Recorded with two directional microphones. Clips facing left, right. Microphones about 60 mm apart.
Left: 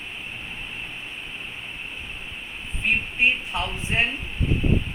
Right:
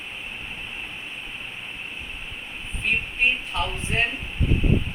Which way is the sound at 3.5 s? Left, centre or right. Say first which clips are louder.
Even; centre.